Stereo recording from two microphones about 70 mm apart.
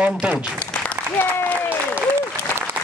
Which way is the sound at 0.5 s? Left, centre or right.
Left.